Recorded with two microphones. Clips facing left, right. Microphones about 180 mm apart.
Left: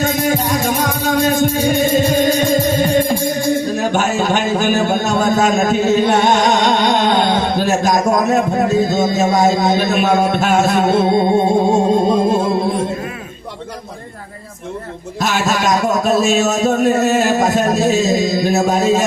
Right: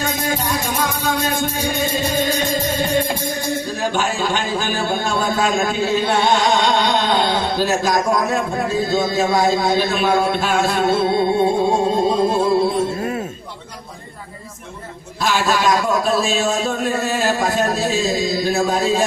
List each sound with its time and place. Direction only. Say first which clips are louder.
0.0 s music: left 6 dB; 45° left (ahead or behind)
3.8 s a sound: left 4 dB; 45° left (ahead or behind)
8.3 s speech: left 6 dB; 45° left (ahead or behind)
11.3 s music: left 3 dB; 45° left (ahead or behind)
15.2 s a man's voice: left 1 dB; 45° left (ahead or behind)